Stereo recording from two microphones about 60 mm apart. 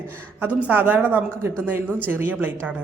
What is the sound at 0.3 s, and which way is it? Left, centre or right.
A woman's voice, right.